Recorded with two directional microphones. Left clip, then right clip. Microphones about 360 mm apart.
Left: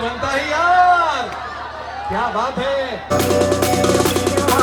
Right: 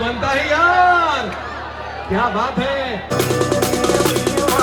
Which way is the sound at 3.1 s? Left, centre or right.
Centre.